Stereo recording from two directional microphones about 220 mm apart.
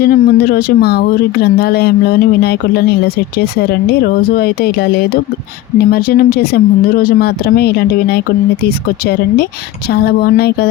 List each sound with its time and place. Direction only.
0.0 s speech: 45° left (ahead or behind)